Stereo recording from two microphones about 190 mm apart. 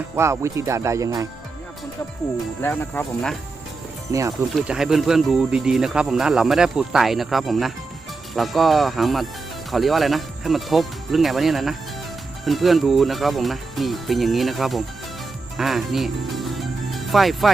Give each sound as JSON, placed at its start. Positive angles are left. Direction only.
{"t": 0.2, "sound": "speech", "side_deg": -15}
{"t": 2.6, "sound": "speech", "side_deg": 10}
{"t": 4.1, "sound": "speech", "side_deg": -15}
{"t": 4.5, "sound": "speech", "side_deg": -5}
{"t": 15.5, "sound": "music", "side_deg": 0}